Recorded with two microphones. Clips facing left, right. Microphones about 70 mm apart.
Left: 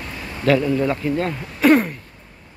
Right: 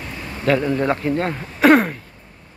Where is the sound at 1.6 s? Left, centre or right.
Right.